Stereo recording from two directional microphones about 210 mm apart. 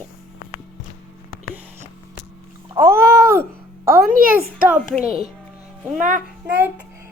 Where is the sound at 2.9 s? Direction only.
50° right (ahead or behind).